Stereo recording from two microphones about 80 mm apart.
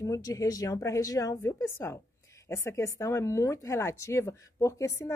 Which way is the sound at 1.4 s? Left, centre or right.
Left.